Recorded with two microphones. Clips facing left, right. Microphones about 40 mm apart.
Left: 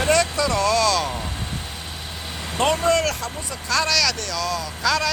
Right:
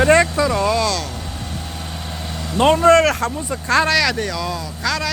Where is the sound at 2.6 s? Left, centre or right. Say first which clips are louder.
Right 7 dB; right; by 4.6 s centre.